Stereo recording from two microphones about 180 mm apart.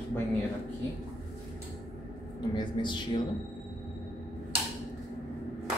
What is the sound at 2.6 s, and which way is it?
Speech, 25° left (ahead or behind).